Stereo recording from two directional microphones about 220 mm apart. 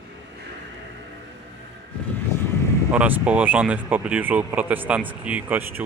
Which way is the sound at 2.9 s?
5° right (ahead or behind).